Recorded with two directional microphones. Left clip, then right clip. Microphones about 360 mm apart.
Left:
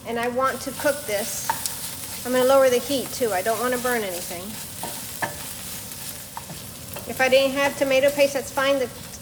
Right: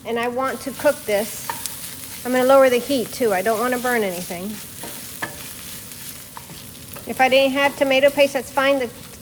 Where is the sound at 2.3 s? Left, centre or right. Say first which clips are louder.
Right 3 dB; right.